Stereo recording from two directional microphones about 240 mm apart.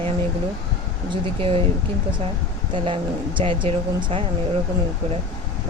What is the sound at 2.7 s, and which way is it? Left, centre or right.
Speech, right.